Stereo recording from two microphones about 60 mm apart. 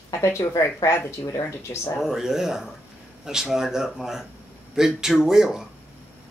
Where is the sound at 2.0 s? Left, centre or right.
Centre.